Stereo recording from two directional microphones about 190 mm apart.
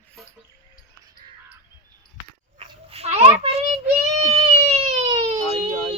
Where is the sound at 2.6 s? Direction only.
35° right (ahead or behind).